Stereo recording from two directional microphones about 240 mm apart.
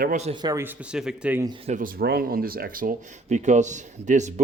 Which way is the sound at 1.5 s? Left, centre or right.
Right.